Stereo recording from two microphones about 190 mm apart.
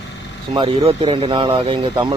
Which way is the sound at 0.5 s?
25° right (ahead or behind).